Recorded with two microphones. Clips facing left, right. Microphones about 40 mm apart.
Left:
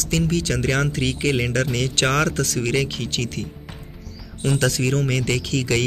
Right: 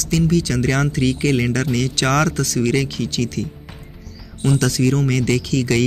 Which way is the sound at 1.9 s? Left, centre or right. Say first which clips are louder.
Right 1 dB; left.